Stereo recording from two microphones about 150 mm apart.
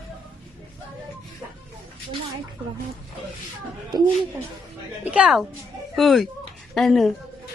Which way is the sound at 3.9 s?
25° right (ahead or behind).